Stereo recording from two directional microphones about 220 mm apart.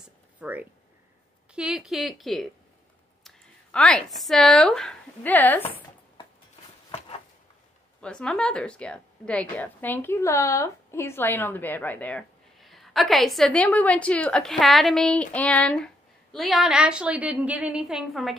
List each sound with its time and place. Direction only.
0.4 s a woman's voice: 5° right (ahead or behind)
6.9 s a sound: 25° left (ahead or behind)
8.0 s a woman's voice: 5° left (ahead or behind)